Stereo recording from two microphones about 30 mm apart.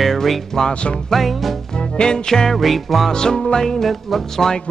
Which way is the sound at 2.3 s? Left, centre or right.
Centre.